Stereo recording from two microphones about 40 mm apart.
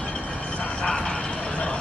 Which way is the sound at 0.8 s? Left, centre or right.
Left.